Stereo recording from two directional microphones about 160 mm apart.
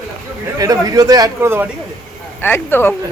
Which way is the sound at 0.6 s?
20° right (ahead or behind).